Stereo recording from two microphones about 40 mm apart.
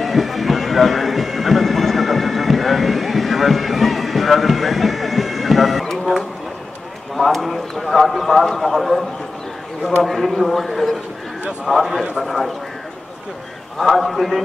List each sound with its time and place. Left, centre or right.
0.0 s music: centre
7.2 s clip-clop: centre
10.0 s a man's voice: centre
13.9 s a man's voice: centre